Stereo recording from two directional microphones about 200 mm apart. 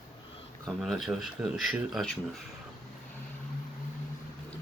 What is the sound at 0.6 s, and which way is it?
Speech, centre (ahead or behind).